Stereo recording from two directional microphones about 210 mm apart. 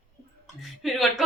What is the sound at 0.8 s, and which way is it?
Speech, centre (ahead or behind).